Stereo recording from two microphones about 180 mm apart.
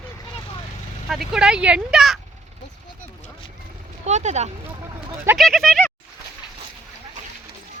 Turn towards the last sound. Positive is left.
turn(degrees=5)  # may be behind; listen again after turning